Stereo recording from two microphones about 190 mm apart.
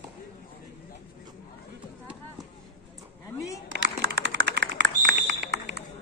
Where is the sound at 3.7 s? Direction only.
55° right (ahead or behind).